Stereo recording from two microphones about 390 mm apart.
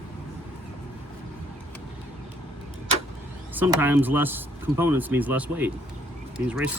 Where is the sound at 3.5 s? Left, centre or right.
Centre.